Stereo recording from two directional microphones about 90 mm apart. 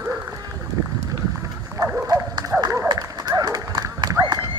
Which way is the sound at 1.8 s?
40° right (ahead or behind).